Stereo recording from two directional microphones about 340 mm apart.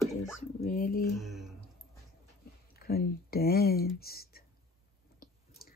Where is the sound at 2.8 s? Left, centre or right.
Left.